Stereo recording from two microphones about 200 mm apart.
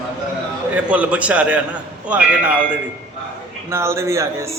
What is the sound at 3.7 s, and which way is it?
Speech, 15° right (ahead or behind).